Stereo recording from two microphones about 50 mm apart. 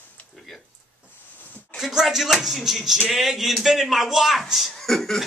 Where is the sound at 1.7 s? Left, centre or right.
Centre.